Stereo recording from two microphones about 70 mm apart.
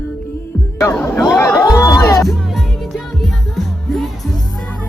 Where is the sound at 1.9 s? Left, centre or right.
Left.